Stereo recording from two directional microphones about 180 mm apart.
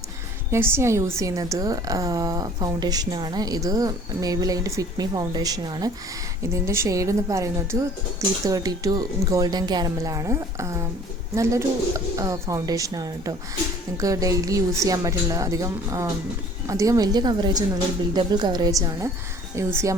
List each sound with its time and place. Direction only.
0.5 s a woman's voice: 15° right (ahead or behind)